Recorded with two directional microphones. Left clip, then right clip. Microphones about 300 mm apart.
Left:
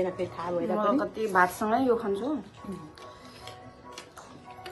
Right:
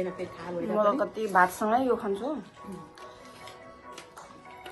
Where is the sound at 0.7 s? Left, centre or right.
Centre.